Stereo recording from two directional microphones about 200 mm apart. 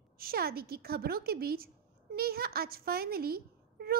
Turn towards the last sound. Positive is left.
turn(degrees=-50)  # may be behind; listen again after turning